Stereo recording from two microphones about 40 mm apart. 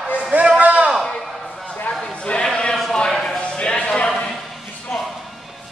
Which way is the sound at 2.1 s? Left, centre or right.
Left.